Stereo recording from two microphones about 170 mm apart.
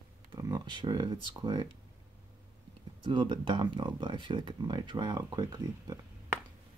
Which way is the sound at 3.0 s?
30° right (ahead or behind).